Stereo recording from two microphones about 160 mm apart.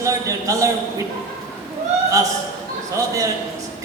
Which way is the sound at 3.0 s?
20° right (ahead or behind).